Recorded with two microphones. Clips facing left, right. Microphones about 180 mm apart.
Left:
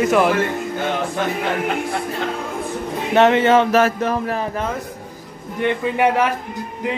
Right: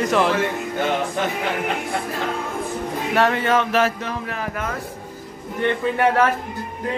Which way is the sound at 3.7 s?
45° left (ahead or behind).